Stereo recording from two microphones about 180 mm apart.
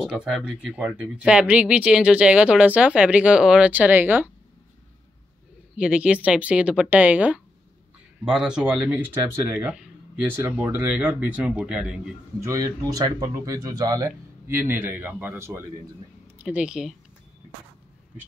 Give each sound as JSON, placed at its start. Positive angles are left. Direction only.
{"t": 0.0, "sound": "speech", "side_deg": -5}
{"t": 5.8, "sound": "speech", "side_deg": -5}
{"t": 12.4, "sound": "speech", "side_deg": -20}